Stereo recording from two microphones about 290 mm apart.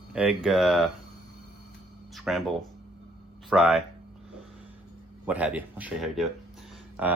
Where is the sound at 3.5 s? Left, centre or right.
Centre.